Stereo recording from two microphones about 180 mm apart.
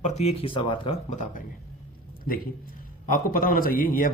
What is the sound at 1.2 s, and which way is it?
Speech, 50° left (ahead or behind).